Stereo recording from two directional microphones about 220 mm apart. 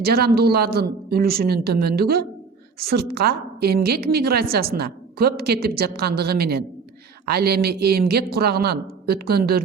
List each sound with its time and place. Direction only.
0.0 s a man's voice: 45° right (ahead or behind)